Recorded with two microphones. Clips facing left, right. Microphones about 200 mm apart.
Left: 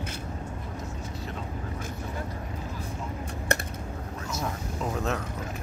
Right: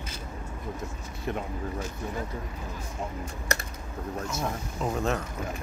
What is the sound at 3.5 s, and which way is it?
Typing, 55° left (ahead or behind).